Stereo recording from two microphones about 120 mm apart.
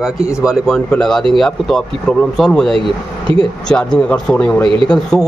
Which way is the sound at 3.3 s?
45° right (ahead or behind).